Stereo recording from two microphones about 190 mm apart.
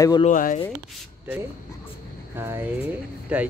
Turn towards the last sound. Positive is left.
turn(degrees=-5)  # may be behind; listen again after turning